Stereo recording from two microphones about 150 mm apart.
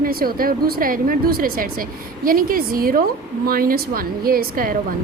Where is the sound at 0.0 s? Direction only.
80° right.